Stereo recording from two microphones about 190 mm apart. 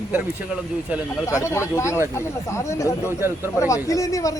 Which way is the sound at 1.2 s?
15° left (ahead or behind).